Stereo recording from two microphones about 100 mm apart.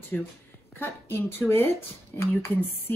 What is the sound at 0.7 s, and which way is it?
Speech, 20° left (ahead or behind).